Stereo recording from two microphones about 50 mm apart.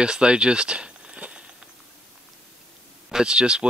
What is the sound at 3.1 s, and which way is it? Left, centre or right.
Speech, centre.